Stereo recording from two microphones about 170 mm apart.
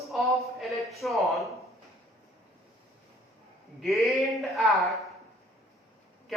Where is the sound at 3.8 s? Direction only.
Centre (ahead or behind).